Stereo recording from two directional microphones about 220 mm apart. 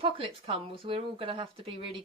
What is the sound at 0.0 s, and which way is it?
Speech, 25° right (ahead or behind).